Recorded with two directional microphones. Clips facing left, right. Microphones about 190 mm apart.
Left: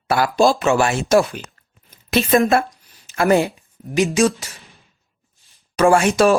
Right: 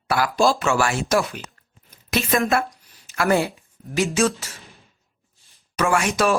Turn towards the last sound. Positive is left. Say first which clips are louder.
# left 6 dB
turn(degrees=30)  # may be behind; listen again after turning